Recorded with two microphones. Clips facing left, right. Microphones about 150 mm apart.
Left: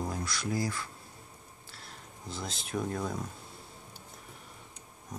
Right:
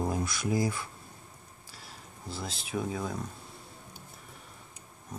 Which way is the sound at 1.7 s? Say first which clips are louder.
Even; 5° right (ahead or behind).